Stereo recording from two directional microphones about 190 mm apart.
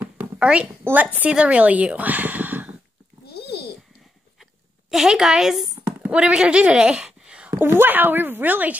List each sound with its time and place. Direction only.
0.0 s speech: 10° right (ahead or behind)
3.3 s a sound: 55° left (ahead or behind)
4.9 s speech: centre (ahead or behind)